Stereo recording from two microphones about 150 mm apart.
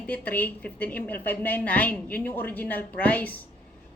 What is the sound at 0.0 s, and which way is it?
A woman's voice, 10° left (ahead or behind).